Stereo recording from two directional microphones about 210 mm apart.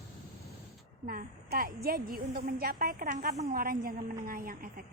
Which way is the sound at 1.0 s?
45° right (ahead or behind).